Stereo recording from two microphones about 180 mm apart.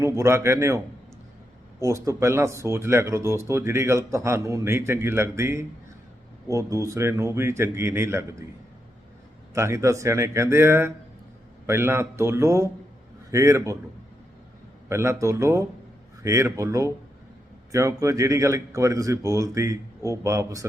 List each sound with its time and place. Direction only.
0.0 s speech: 15° right (ahead or behind)
1.8 s speech: 15° right (ahead or behind)
9.6 s speech: 15° right (ahead or behind)
14.8 s speech: 15° right (ahead or behind)